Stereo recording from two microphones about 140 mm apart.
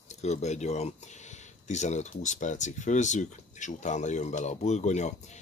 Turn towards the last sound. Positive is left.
turn(degrees=55)  # may be behind; listen again after turning